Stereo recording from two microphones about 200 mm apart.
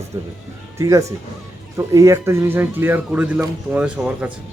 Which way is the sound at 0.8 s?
15° right (ahead or behind).